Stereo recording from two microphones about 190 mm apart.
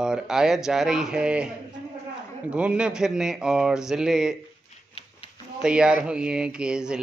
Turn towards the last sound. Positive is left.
turn(degrees=-5)  # may be behind; listen again after turning